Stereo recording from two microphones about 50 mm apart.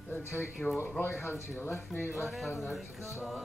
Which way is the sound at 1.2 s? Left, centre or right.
Left.